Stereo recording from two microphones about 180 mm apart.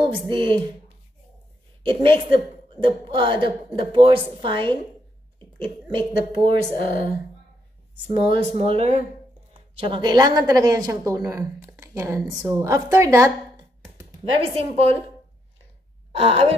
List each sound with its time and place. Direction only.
0.3 s a woman's voice: 30° right (ahead or behind)
1.8 s a woman's voice: 30° right (ahead or behind)
5.9 s a woman's voice: 30° right (ahead or behind)
6.7 s speech: 50° left (ahead or behind)
8.1 s a woman's voice: 30° right (ahead or behind)
14.2 s speech: 30° right (ahead or behind)
16.1 s speech: 35° right (ahead or behind)